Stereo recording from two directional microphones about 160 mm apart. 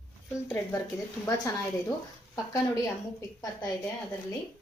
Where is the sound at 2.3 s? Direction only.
20° left (ahead or behind).